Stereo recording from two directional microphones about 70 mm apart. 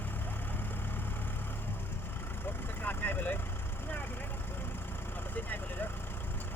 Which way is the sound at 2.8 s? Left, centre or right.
Left.